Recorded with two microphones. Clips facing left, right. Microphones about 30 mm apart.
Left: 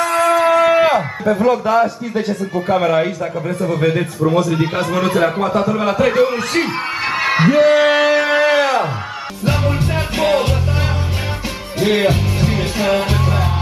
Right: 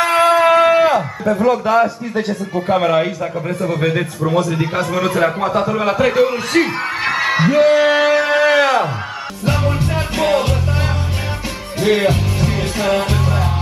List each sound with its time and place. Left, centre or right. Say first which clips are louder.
0.0 s a sound: right 2 dB; right
0.7 s a man's voice: even; centre
7.2 s music: left 1 dB; centre
11.8 s music: even; centre